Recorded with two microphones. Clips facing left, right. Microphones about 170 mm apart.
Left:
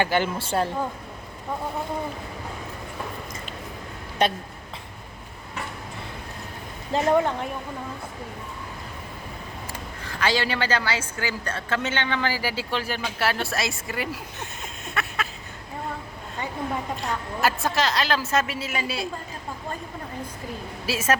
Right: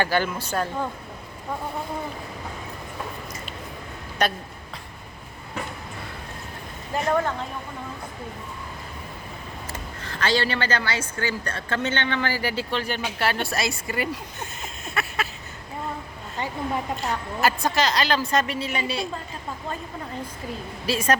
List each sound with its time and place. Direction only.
0.0 s a man's voice: 20° left (ahead or behind)
4.2 s a man's voice: 25° left (ahead or behind)
6.9 s speech: 20° left (ahead or behind)
9.7 s speech: 10° left (ahead or behind)
17.0 s a woman's voice: centre (ahead or behind)
20.8 s a woman's voice: 5° left (ahead or behind)